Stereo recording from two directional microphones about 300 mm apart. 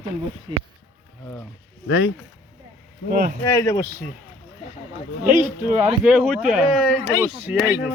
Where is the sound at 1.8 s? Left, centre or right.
Left.